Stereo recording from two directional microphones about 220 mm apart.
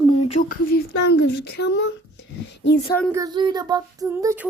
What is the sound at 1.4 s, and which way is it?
A woman's voice, 50° left (ahead or behind).